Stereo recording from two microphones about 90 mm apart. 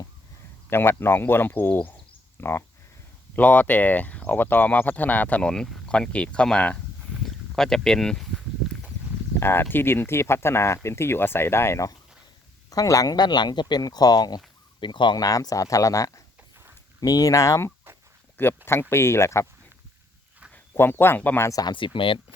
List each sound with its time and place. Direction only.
0.7 s speech: 25° left (ahead or behind); by 8.3 s 5° left (ahead or behind)
9.4 s speech: 25° left (ahead or behind)
12.7 s speech: 40° left (ahead or behind)
14.8 s speech: 60° left (ahead or behind)
15.2 s speech: 40° left (ahead or behind)
18.3 s speech: 25° left (ahead or behind)
20.7 s speech: 25° left (ahead or behind)
21.4 s speech: 40° left (ahead or behind)
21.7 s speech: 65° left (ahead or behind)